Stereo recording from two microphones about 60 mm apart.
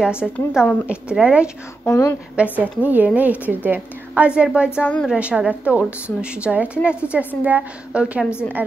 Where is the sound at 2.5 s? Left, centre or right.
Right.